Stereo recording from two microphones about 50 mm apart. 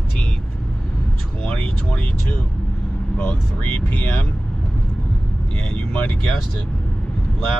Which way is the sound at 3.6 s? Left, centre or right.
Left.